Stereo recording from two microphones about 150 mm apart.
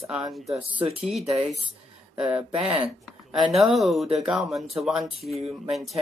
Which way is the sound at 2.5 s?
35° right (ahead or behind).